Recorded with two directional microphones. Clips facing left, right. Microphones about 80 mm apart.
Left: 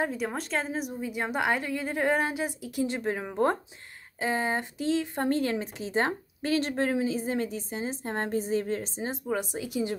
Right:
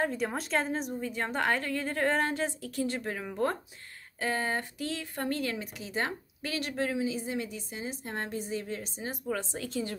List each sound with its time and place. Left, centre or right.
0.0 s a woman's voice: centre; by 9.2 s left
9.3 s a woman's voice: centre